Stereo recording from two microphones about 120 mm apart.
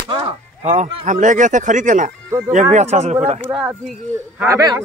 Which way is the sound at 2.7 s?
75° right (ahead or behind).